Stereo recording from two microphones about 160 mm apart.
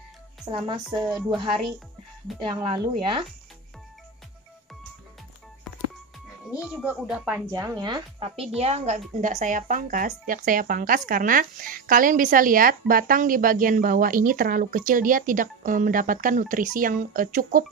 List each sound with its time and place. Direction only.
0.5 s a woman's voice: 30° right (ahead or behind)
1.0 s speech: centre (ahead or behind)
2.4 s speech: 30° right (ahead or behind)
6.6 s speech: 5° right (ahead or behind)
7.3 s a woman's voice: 20° right (ahead or behind); by 17.6 s 60° right (ahead or behind)